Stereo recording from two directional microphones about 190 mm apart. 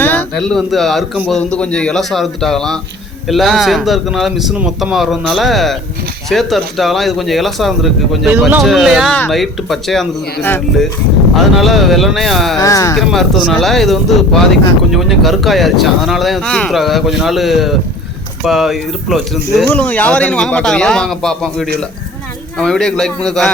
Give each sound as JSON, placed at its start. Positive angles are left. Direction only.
{"t": 0.0, "sound": "a sound", "side_deg": 10}
{"t": 0.4, "sound": "speech", "side_deg": 0}
{"t": 12.5, "sound": "speech", "side_deg": 15}
{"t": 13.0, "sound": "speech", "side_deg": 0}